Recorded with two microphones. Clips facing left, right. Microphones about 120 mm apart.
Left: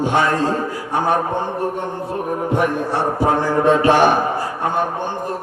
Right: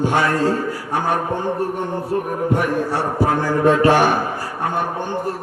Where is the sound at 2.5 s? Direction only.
20° left (ahead or behind).